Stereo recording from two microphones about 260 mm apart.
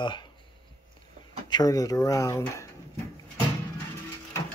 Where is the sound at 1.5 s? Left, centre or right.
Centre.